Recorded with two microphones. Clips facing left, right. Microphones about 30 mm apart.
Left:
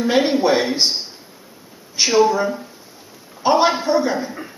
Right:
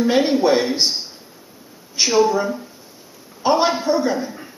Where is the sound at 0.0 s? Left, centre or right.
Centre.